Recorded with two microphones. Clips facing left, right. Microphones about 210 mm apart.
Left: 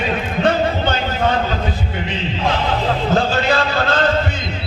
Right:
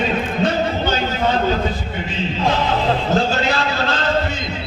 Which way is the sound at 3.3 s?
55° left (ahead or behind).